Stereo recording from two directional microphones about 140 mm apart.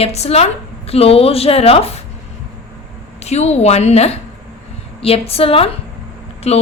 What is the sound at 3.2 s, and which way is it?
A woman's voice, 50° left (ahead or behind).